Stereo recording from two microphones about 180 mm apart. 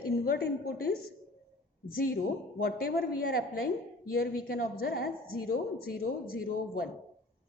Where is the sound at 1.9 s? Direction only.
55° left (ahead or behind).